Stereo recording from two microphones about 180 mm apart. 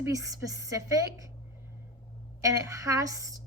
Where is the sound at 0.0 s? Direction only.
20° right (ahead or behind).